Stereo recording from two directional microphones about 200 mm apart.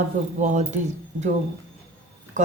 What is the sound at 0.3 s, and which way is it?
Speech, 35° right (ahead or behind).